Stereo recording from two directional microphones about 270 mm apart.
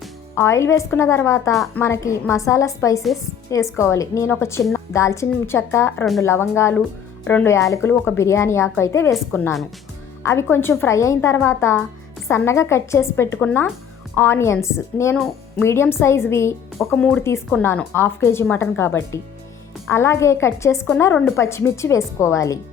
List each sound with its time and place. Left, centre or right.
0.0 s speech: centre
1.5 s a woman's voice: centre
1.8 s a woman's voice: centre